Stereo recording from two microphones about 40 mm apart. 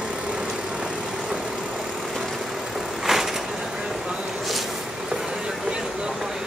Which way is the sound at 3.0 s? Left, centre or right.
Centre.